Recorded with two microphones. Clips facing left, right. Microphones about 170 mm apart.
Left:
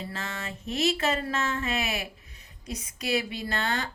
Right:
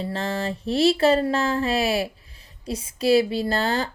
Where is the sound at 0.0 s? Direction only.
35° right (ahead or behind).